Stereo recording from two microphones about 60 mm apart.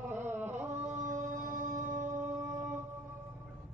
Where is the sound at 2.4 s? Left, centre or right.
Right.